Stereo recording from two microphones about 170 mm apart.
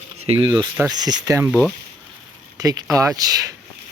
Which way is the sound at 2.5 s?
20° right (ahead or behind).